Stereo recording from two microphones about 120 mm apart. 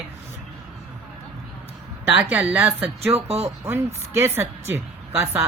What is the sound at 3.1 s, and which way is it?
Speech, 55° right (ahead or behind).